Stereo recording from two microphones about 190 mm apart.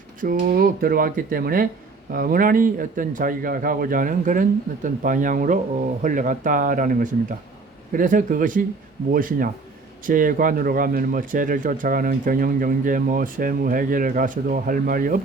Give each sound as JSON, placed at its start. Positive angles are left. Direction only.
{"t": 0.2, "sound": "speech", "side_deg": -50}